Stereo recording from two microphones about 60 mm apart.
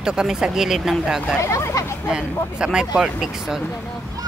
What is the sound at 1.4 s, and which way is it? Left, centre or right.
Hubbub, left.